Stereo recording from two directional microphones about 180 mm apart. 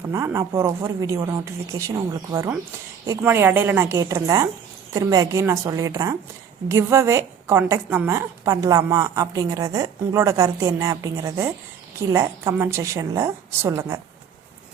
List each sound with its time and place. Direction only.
0.1 s a woman's voice: 15° right (ahead or behind)